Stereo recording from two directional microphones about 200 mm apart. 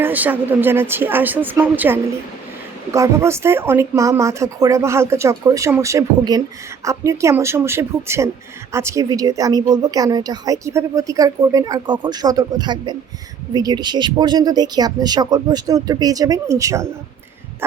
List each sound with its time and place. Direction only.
0.0 s a woman's voice: 10° right (ahead or behind)